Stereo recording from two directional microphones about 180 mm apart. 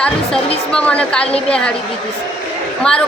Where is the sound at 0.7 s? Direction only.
5° left (ahead or behind).